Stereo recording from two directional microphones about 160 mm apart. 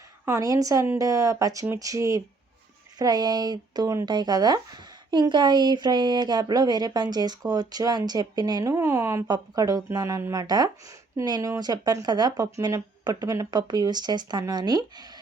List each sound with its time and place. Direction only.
0.3 s speech: 20° right (ahead or behind)